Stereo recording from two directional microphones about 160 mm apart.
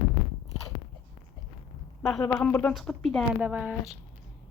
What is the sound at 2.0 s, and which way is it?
Speech, 10° left (ahead or behind).